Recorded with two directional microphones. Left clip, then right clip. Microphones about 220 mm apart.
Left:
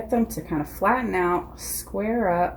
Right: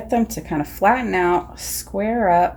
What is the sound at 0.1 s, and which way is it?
Speech, 30° right (ahead or behind).